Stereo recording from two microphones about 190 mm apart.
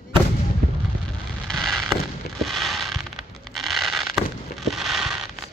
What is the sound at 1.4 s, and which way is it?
Fireworks, centre (ahead or behind).